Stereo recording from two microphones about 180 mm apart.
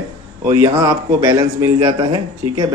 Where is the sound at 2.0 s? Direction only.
25° right (ahead or behind).